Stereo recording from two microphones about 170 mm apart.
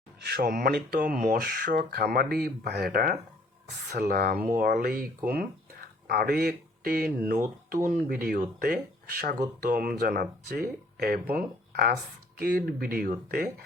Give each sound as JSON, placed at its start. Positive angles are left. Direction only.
{"t": 0.2, "sound": "speech", "side_deg": -65}